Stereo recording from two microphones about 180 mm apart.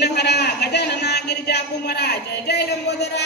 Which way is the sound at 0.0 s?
65° left (ahead or behind).